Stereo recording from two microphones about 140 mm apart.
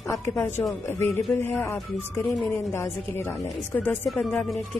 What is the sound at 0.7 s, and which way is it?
Speech, 20° left (ahead or behind).